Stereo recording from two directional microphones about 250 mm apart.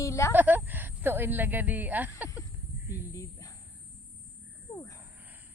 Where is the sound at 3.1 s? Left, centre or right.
Centre.